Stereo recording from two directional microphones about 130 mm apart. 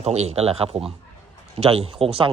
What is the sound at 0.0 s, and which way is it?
A man's voice, 55° right (ahead or behind).